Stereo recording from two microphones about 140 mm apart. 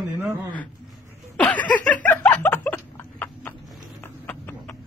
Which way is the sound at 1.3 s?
10° left (ahead or behind).